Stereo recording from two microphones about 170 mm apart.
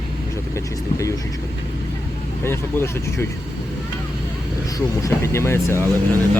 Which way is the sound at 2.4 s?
15° left (ahead or behind).